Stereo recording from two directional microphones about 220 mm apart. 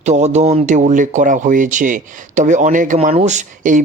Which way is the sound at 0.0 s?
30° right (ahead or behind).